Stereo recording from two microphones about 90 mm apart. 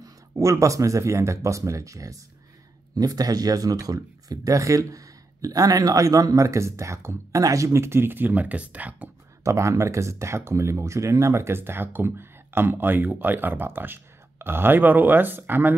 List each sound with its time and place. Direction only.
0.0 s speech: 35° right (ahead or behind); by 9.1 s 15° right (ahead or behind)
9.4 s speech: 35° right (ahead or behind)